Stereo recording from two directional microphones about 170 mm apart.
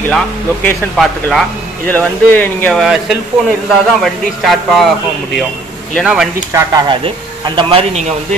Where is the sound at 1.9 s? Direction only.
10° left (ahead or behind).